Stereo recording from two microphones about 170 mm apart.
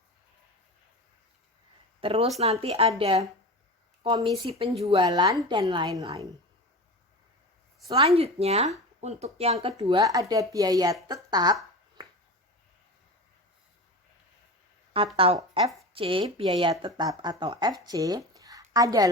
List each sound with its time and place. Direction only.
2.0 s a woman's voice: 35° right (ahead or behind)
7.9 s speech: 30° right (ahead or behind)
10.0 s a woman's voice: 20° right (ahead or behind)
14.9 s a woman's voice: 30° right (ahead or behind)
18.3 s a sound: 20° right (ahead or behind)